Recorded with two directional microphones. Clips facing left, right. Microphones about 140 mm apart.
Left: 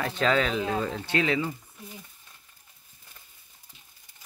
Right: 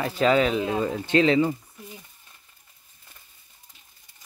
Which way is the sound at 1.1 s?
30° right (ahead or behind).